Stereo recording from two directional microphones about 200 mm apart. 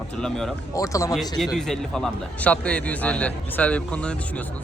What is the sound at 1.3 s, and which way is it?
A man's voice, centre (ahead or behind).